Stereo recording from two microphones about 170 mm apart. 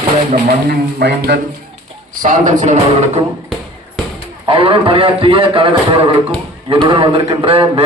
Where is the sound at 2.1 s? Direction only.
50° right (ahead or behind).